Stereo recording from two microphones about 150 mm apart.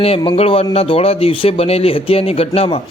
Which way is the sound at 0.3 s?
40° left (ahead or behind).